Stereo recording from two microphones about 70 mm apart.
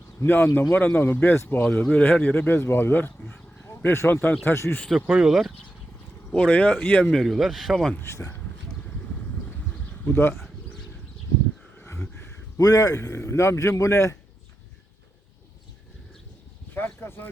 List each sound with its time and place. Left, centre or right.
0.2 s speech: left
2.6 s speech: left
4.1 s speech: left
4.4 s speech: left
4.9 s speech: centre
6.3 s speech: centre
7.1 s speech: centre
8.0 s speech: left
10.0 s speech: left
12.5 s a man's voice: left
13.0 s a man's voice: left
16.7 s a sound: left